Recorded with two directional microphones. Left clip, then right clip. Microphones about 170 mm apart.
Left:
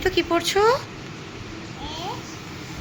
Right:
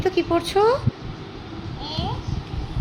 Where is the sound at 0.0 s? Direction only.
15° right (ahead or behind).